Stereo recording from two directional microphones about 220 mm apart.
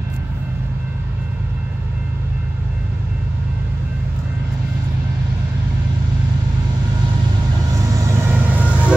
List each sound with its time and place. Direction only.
8.2 s vehicle: 10° right (ahead or behind)